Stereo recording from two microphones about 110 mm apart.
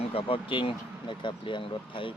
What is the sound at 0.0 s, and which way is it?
Speech, 60° left (ahead or behind).